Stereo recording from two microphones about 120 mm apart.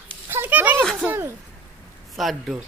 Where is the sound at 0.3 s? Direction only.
15° right (ahead or behind).